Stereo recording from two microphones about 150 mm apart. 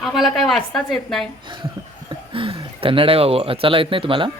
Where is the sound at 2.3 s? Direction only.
35° right (ahead or behind).